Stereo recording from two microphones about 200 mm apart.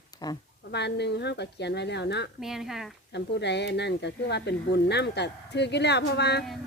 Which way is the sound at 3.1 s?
60° left (ahead or behind).